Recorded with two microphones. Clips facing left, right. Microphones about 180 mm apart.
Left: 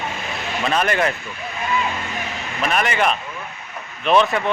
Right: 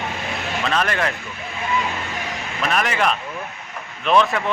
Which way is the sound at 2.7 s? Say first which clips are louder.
Left 1 dB; centre (ahead or behind).